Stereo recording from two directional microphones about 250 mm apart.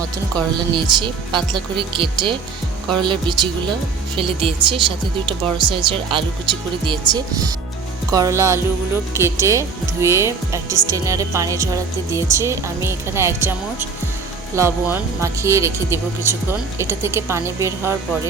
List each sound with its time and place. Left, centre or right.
0.4 s speech: centre